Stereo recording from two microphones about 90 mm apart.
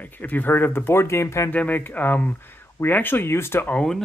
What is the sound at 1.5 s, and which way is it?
Speech, 15° left (ahead or behind).